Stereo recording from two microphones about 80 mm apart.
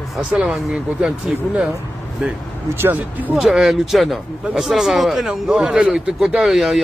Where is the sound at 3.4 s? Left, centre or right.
Centre.